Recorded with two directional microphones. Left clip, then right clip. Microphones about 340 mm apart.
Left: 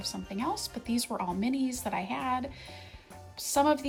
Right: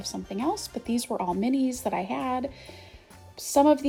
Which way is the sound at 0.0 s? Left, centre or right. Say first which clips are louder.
Right 4 dB; left.